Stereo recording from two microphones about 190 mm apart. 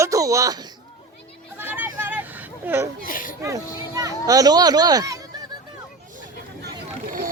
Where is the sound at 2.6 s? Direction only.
15° right (ahead or behind).